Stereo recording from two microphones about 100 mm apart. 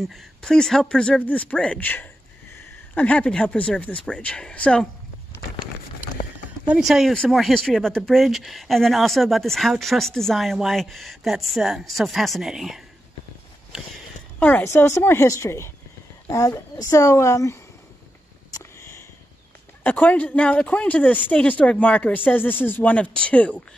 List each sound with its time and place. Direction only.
0.0 s speech: 5° left (ahead or behind)
6.0 s a sound: 15° right (ahead or behind)
6.8 s speech: centre (ahead or behind)
14.4 s speech: 25° left (ahead or behind)
18.5 s sniff: 30° left (ahead or behind)
19.8 s speech: 15° left (ahead or behind)